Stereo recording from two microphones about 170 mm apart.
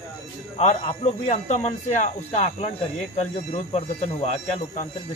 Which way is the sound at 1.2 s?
40° left (ahead or behind).